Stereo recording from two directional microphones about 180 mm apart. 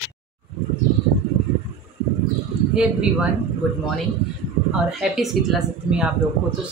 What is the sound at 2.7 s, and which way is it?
Speech, 5° right (ahead or behind).